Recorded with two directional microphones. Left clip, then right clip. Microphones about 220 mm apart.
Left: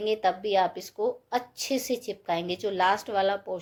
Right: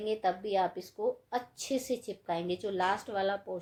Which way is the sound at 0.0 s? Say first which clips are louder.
Left 6 dB; 25° left (ahead or behind).